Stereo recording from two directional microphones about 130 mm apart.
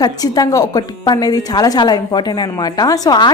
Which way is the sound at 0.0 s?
30° left (ahead or behind).